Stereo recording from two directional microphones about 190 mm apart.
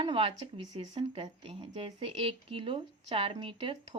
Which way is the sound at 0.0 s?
30° right (ahead or behind).